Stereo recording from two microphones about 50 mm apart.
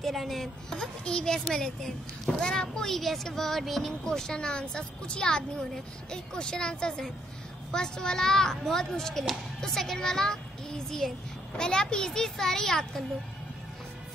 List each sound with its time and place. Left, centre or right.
0.0 s speech: centre
0.7 s a child's voice: centre